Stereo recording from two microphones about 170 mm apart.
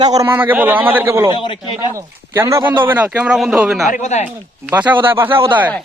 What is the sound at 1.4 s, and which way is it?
Speech, 30° left (ahead or behind).